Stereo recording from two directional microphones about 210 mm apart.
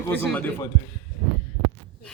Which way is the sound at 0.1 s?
5° left (ahead or behind).